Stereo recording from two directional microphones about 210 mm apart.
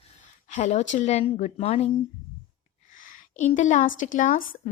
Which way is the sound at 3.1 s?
35° left (ahead or behind).